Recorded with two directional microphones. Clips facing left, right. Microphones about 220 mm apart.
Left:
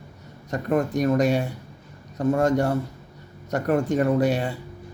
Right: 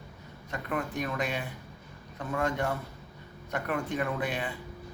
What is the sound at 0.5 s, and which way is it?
A man's voice, 40° left (ahead or behind).